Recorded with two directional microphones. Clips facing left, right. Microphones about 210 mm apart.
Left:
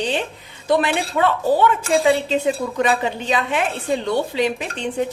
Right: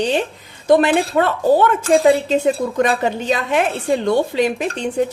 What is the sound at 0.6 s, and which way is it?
Speech, 45° right (ahead or behind).